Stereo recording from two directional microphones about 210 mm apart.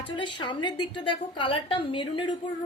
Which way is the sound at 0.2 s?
20° left (ahead or behind).